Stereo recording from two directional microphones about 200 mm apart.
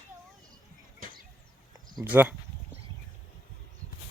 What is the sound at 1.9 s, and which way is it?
Speech, 10° right (ahead or behind).